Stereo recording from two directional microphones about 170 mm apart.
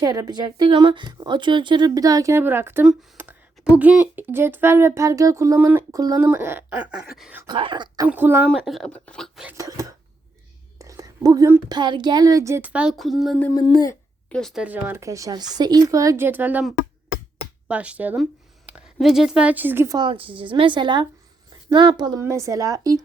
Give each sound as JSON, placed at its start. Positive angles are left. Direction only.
{"t": 0.0, "sound": "a woman's voice", "side_deg": -20}
{"t": 2.8, "sound": "a sound", "side_deg": -10}
{"t": 3.8, "sound": "speech", "side_deg": -10}
{"t": 7.4, "sound": "a woman's voice", "side_deg": -30}
{"t": 8.0, "sound": "speech", "side_deg": -10}
{"t": 8.4, "sound": "speech", "side_deg": 0}
{"t": 9.6, "sound": "a woman's voice", "side_deg": -20}
{"t": 10.8, "sound": "whispering", "side_deg": -20}
{"t": 11.8, "sound": "speech", "side_deg": -25}
{"t": 13.5, "sound": "speech", "side_deg": 25}
{"t": 14.3, "sound": "speech", "side_deg": 5}
{"t": 17.7, "sound": "a woman's voice", "side_deg": -10}
{"t": 20.0, "sound": "a woman's voice", "side_deg": -30}